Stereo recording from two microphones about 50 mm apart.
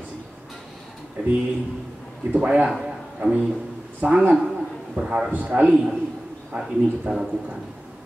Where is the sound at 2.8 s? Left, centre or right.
Centre.